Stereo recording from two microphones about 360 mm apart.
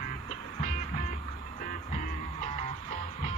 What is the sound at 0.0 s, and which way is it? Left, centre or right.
Music, centre.